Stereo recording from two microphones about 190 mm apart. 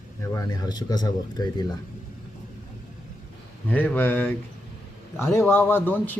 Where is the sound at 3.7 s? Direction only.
10° left (ahead or behind).